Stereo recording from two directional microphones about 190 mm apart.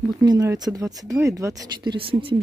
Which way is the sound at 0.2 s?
20° right (ahead or behind).